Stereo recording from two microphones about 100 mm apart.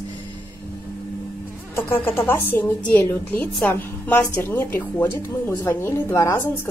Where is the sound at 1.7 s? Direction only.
20° left (ahead or behind).